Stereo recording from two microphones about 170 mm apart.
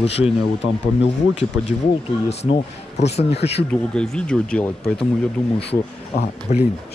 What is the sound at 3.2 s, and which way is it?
Speech, 35° left (ahead or behind).